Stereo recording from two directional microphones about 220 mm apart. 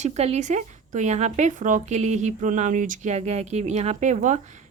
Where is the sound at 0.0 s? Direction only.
30° right (ahead or behind).